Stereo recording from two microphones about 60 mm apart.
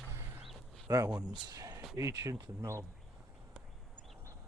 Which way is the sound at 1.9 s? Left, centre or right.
Right.